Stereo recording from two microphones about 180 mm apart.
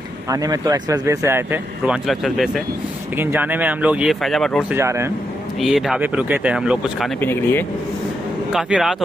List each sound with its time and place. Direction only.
0.3 s speech: 20° right (ahead or behind)
2.0 s speech: centre (ahead or behind)
4.7 s speech: 15° right (ahead or behind)
5.6 s speech: centre (ahead or behind)
7.2 s speech: 10° left (ahead or behind)
8.5 s speech: 5° right (ahead or behind)